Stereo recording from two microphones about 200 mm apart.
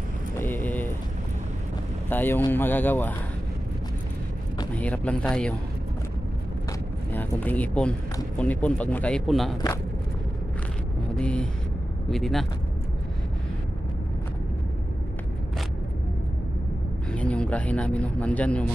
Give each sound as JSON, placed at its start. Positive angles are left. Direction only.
{"t": 0.4, "sound": "a sound", "side_deg": 10}
{"t": 2.0, "sound": "speech", "side_deg": 10}
{"t": 4.7, "sound": "speech", "side_deg": 5}
{"t": 7.1, "sound": "speech", "side_deg": 10}
{"t": 11.1, "sound": "speech", "side_deg": 5}
{"t": 17.1, "sound": "speech", "side_deg": 5}